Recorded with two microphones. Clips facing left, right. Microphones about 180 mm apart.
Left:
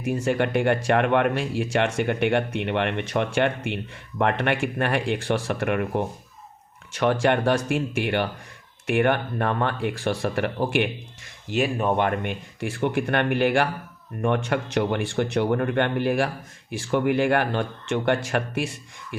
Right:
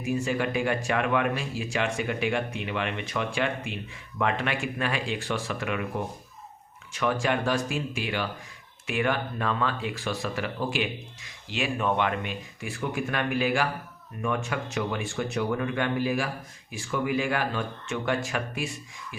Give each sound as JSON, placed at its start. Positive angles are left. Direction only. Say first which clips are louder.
{"t": 0.1, "sound": "speech", "louder": "left 4 dB", "side_deg": 60}
{"t": 7.0, "sound": "speech", "louder": "left 5 dB", "side_deg": 65}
{"t": 11.4, "sound": "speech", "louder": "left 5 dB", "side_deg": 45}